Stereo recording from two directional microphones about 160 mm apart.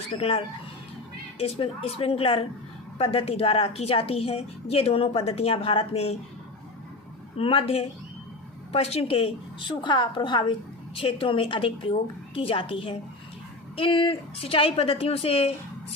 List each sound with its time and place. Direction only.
0.1 s a woman's voice: 35° left (ahead or behind)
7.3 s a woman's voice: 35° left (ahead or behind)